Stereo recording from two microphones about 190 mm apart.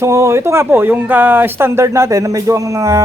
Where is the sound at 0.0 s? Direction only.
15° right (ahead or behind).